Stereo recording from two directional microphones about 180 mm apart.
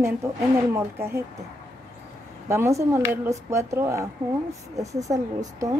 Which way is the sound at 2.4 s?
15° right (ahead or behind).